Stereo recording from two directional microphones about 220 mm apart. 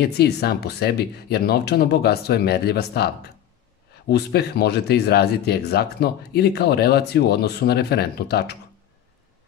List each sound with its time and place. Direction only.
0.0 s speech: 45° left (ahead or behind)